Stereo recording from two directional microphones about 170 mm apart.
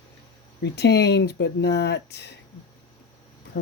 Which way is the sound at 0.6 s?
80° left.